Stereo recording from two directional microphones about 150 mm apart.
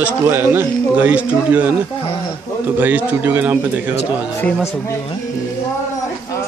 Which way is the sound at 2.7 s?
10° right (ahead or behind).